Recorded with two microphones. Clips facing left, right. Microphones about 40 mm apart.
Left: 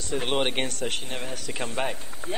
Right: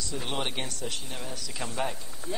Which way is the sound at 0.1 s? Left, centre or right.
Left.